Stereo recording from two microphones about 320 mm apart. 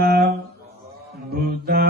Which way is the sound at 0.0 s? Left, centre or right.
Right.